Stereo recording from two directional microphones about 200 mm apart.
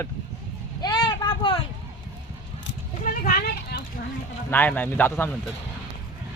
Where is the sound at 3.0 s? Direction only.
45° left (ahead or behind).